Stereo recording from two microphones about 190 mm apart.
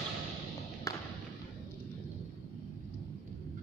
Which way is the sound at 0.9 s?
15° left (ahead or behind).